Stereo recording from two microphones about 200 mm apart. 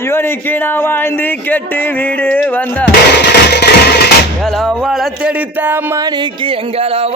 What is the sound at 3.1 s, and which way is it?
Music, 55° left (ahead or behind).